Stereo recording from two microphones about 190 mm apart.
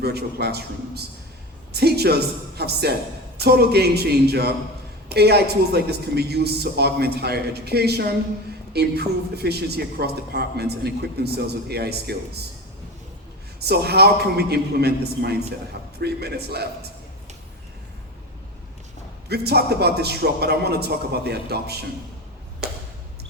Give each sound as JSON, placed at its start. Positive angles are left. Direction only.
{"t": 0.0, "sound": "a man's voice", "side_deg": -55}
{"t": 13.6, "sound": "a man's voice", "side_deg": -55}
{"t": 19.3, "sound": "a man's voice", "side_deg": -55}